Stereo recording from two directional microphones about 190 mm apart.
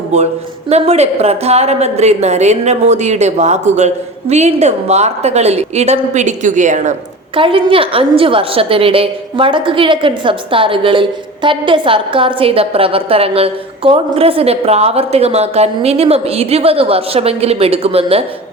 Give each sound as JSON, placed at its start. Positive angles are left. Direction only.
{"t": 0.7, "sound": "speech", "side_deg": -35}
{"t": 7.3, "sound": "a woman's voice", "side_deg": -30}